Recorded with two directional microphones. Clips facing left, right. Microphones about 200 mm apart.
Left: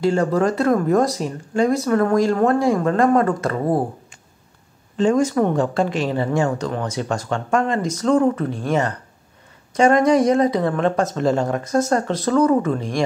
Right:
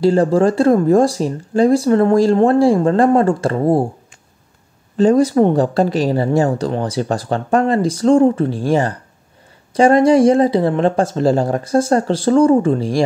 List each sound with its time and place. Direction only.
0.0 s speech: 35° right (ahead or behind)
4.9 s speech: 35° right (ahead or behind)